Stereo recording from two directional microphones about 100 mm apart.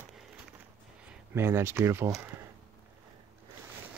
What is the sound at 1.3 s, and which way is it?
Speech, 25° right (ahead or behind).